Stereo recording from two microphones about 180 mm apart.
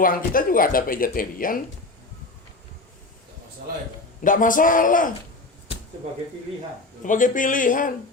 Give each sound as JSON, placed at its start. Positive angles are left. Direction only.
{"t": 0.0, "sound": "speech", "side_deg": 50}
{"t": 4.2, "sound": "speech", "side_deg": 50}
{"t": 7.0, "sound": "speech", "side_deg": 45}